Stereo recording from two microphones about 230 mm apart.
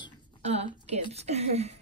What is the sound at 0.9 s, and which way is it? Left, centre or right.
Speech, right.